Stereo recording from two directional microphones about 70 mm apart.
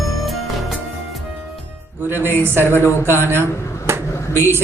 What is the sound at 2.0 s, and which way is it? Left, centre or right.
A man's voice, right.